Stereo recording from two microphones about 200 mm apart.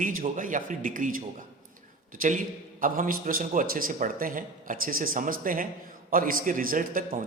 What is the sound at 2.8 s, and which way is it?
A man's voice, 45° right (ahead or behind).